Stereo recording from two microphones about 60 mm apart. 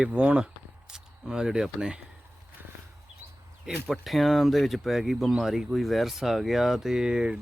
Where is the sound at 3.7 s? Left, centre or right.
Centre.